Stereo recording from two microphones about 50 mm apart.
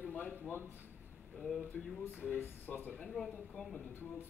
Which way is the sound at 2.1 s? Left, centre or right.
Right.